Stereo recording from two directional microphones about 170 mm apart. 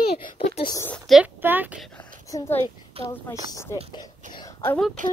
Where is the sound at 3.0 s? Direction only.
35° right (ahead or behind).